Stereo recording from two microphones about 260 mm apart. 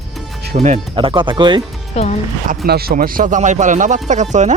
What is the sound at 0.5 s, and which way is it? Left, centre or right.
Speech, right.